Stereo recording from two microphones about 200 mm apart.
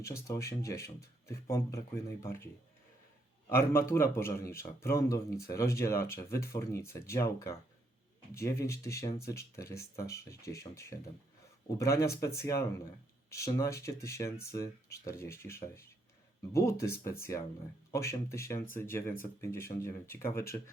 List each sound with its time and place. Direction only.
0.0 s a man's voice: 15° left (ahead or behind)
3.5 s a man's voice: 15° left (ahead or behind)